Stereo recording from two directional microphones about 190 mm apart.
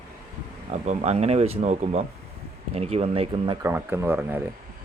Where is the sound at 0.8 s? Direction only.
40° right (ahead or behind).